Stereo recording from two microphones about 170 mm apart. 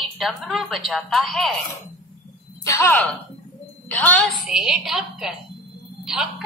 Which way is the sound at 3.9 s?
10° left (ahead or behind).